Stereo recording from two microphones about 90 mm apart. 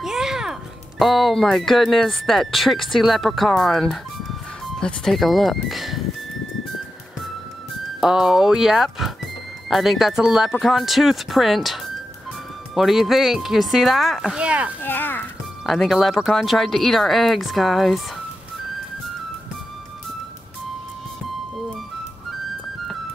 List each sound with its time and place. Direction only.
0.0 s a child's voice: 5° right (ahead or behind)
8.0 s speech: 5° right (ahead or behind)
14.8 s a sound: 20° left (ahead or behind)
15.6 s speech: centre (ahead or behind)